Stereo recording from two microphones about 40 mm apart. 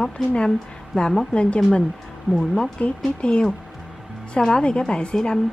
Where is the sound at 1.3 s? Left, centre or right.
Left.